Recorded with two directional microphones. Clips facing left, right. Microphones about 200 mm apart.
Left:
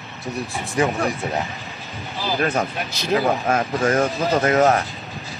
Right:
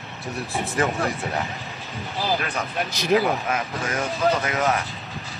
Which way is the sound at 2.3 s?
45° left (ahead or behind).